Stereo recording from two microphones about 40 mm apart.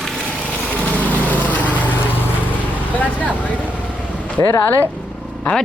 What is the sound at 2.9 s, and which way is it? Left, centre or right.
Speech, left.